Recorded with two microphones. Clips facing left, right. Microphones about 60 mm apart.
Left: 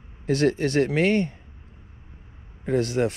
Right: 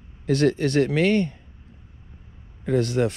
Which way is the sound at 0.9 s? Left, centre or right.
Left.